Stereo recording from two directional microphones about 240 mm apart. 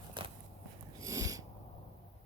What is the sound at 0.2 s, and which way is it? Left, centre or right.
Walk, centre.